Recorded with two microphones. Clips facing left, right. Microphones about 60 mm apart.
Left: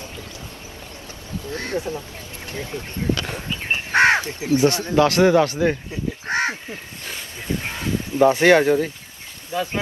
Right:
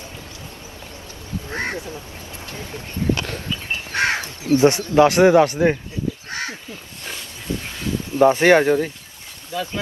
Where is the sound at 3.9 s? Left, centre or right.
Left.